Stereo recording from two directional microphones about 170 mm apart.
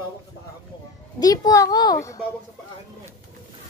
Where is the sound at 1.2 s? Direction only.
20° left (ahead or behind).